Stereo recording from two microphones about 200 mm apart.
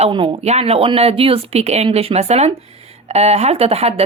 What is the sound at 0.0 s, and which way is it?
Speech, 25° right (ahead or behind).